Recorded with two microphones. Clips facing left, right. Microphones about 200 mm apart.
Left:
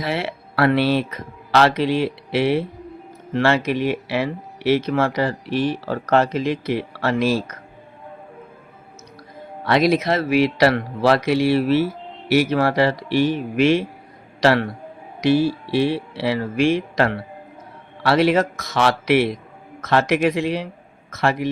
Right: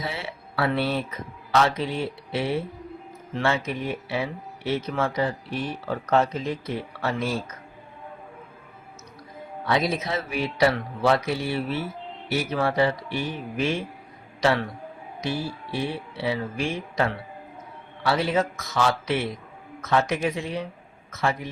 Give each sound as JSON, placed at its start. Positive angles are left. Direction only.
{"t": 0.0, "sound": "speech", "side_deg": 80}
{"t": 9.6, "sound": "a man's voice", "side_deg": 80}